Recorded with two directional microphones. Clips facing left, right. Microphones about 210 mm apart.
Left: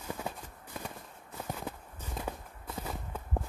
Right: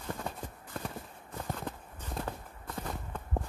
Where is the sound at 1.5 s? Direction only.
10° left (ahead or behind).